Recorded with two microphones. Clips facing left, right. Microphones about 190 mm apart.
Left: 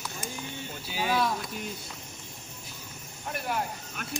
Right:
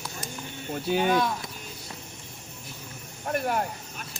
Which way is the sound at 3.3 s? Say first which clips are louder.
Right 5 dB; 50° right (ahead or behind).